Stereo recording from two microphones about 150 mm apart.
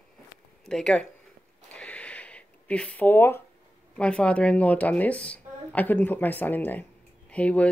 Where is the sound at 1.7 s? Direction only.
10° left (ahead or behind).